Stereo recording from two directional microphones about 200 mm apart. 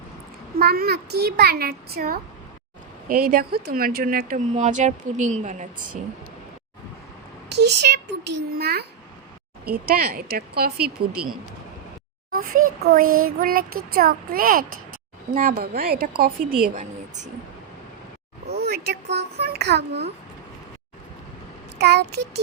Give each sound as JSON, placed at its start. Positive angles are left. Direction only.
{"t": 0.6, "sound": "speech", "side_deg": -50}
{"t": 7.5, "sound": "a child's voice", "side_deg": -55}
{"t": 12.8, "sound": "a woman's voice", "side_deg": -45}
{"t": 18.4, "sound": "speech", "side_deg": -50}
{"t": 21.8, "sound": "a child's voice", "side_deg": -55}